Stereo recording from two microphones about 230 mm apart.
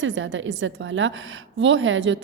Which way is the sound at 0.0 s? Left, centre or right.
Right.